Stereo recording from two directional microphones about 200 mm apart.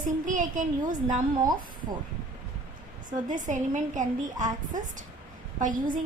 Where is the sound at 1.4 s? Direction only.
20° right (ahead or behind).